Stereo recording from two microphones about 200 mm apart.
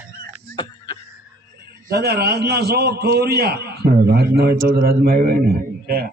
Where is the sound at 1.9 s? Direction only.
50° right (ahead or behind).